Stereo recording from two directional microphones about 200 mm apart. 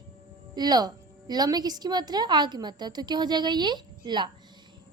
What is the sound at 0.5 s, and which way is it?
A woman's voice, 20° right (ahead or behind).